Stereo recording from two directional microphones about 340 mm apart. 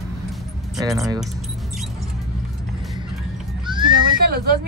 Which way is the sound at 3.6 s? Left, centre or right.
Centre.